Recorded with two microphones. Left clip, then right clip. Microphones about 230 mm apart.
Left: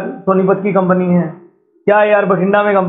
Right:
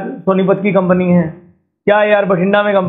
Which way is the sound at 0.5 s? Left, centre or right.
Right.